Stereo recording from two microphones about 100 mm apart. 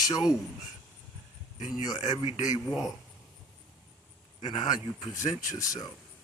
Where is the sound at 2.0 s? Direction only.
90° left.